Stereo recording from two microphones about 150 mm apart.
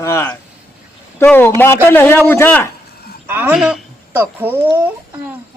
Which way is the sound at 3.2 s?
15° right (ahead or behind).